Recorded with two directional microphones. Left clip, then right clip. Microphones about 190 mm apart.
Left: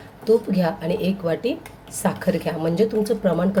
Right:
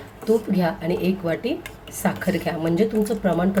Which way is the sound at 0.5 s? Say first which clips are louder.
Left 1 dB; 15° left (ahead or behind).